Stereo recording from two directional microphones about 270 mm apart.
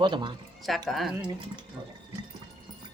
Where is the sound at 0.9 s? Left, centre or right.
Centre.